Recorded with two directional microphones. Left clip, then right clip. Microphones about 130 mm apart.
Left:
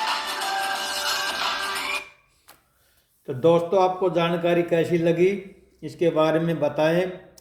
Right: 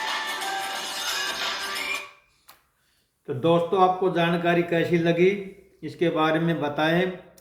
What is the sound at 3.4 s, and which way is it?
A man's voice, 25° left (ahead or behind).